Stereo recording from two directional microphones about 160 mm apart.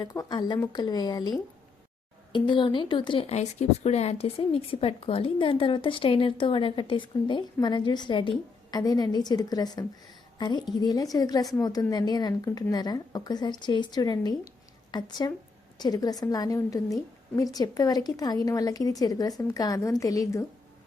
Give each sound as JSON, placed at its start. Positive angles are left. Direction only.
{"t": 0.0, "sound": "a woman's voice", "side_deg": 20}
{"t": 2.3, "sound": "a woman's voice", "side_deg": 30}